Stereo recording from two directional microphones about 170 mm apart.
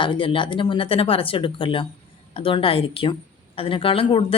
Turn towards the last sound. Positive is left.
turn(degrees=30)  # may be behind; listen again after turning